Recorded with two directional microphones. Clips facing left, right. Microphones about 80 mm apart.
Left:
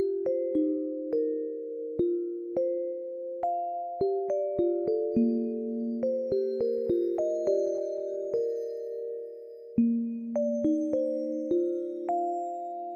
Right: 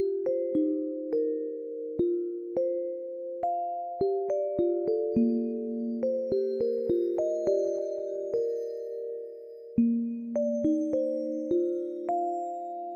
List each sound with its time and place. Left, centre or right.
5.2 s music: right
7.0 s music: right